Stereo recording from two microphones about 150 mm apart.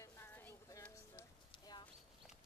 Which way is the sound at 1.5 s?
30° left (ahead or behind).